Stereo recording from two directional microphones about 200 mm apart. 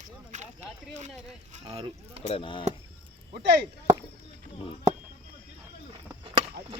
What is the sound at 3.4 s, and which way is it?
Speech, 55° right (ahead or behind).